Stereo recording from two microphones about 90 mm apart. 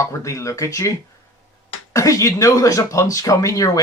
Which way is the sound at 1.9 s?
35° left (ahead or behind).